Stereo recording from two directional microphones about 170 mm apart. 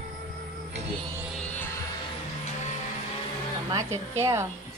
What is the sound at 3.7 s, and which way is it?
Speech, 20° right (ahead or behind).